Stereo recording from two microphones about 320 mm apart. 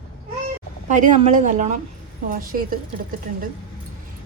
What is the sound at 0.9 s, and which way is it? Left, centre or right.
Speech, right.